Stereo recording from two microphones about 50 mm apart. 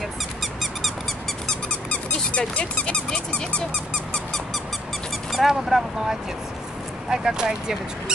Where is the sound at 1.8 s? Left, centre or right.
Left.